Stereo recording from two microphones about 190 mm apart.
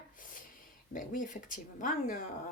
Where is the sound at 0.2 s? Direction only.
45° left (ahead or behind).